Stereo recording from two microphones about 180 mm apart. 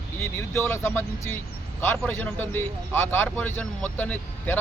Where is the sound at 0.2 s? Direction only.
15° left (ahead or behind).